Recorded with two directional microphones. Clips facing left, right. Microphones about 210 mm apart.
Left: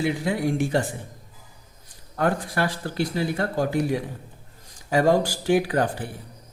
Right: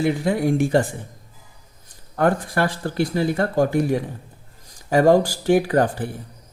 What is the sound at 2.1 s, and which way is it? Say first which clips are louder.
Speech: right 4 dB; 50° right (ahead or behind).